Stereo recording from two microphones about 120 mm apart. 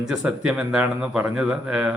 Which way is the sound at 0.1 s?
10° right (ahead or behind).